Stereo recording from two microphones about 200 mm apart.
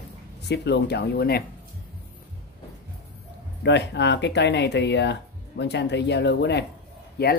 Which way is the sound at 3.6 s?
60° left (ahead or behind).